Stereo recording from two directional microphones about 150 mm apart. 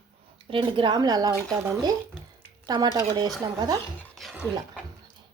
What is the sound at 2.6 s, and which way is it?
Speech, 30° right (ahead or behind).